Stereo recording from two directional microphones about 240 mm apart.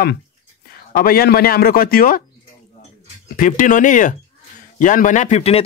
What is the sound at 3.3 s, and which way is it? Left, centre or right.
Speech, left.